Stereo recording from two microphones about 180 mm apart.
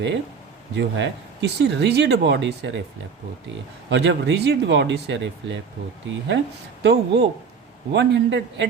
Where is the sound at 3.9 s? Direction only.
75° right (ahead or behind).